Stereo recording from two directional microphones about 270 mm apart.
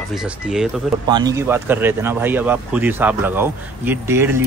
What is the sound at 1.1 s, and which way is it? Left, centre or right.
Speech, centre.